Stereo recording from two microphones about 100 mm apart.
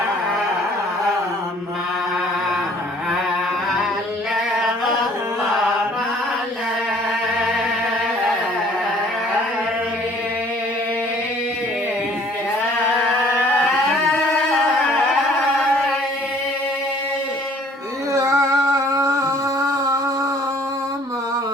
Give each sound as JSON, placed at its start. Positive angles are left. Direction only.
{"t": 18.1, "sound": "singing", "side_deg": -30}